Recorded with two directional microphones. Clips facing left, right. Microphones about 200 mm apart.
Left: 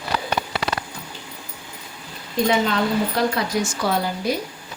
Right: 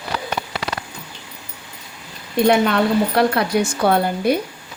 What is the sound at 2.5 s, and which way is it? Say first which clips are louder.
A woman's voice: right 5 dB; 65° right (ahead or behind).